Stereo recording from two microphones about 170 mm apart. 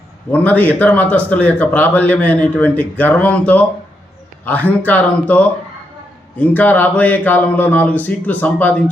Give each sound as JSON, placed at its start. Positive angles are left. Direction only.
{"t": 0.3, "sound": "speech", "side_deg": 10}